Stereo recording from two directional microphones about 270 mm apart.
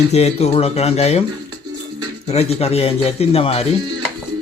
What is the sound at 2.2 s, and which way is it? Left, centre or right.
Speech, left.